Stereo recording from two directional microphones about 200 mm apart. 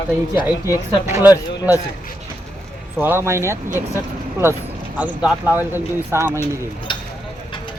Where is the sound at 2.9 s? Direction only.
10° right (ahead or behind).